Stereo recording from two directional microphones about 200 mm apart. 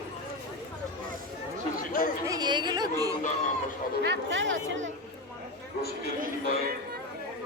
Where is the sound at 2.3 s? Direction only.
20° right (ahead or behind).